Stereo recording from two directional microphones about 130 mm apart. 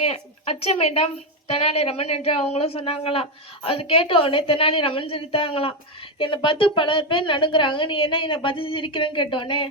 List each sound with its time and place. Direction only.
0.0 s a woman's voice: 50° left (ahead or behind)